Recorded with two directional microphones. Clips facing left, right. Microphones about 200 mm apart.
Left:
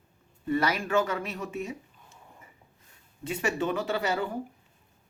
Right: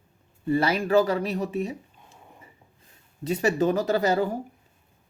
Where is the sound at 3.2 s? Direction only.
35° right (ahead or behind).